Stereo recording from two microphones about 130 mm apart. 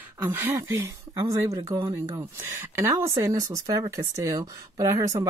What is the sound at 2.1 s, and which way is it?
Speech, 25° right (ahead or behind).